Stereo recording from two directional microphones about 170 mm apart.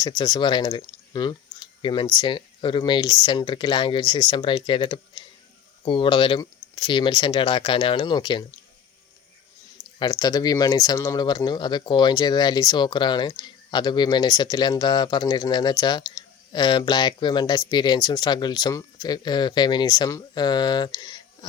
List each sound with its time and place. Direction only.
0.0 s speech: 25° left (ahead or behind)
10.0 s speech: 25° left (ahead or behind)